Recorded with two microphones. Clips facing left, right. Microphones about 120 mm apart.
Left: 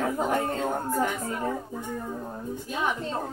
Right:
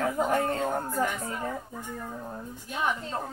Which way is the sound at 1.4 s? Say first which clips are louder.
Left 4 dB; 15° left (ahead or behind).